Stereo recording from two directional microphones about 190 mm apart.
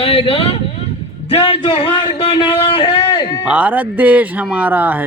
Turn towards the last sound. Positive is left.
turn(degrees=-10)  # may be behind; listen again after turning